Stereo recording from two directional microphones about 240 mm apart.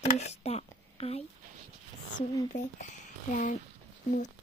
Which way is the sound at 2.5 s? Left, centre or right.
Left.